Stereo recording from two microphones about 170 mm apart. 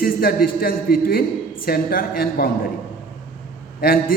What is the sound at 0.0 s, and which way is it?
A man's voice, 60° left (ahead or behind).